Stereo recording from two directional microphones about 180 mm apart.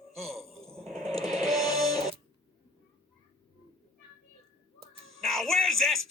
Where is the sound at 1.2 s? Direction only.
20° left (ahead or behind).